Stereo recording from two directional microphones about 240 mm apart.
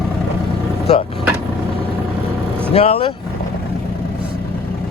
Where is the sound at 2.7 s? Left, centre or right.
Left.